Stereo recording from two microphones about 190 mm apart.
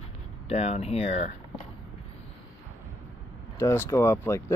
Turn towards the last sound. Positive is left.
turn(degrees=10)  # may be behind; listen again after turning